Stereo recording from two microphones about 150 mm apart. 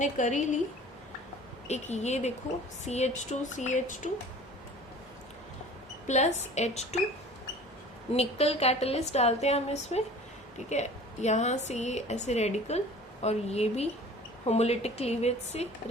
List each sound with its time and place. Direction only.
0.0 s speech: 55° left (ahead or behind)
1.6 s a woman's voice: 50° left (ahead or behind)
6.1 s a woman's voice: 50° left (ahead or behind)
8.1 s a woman's voice: 45° left (ahead or behind)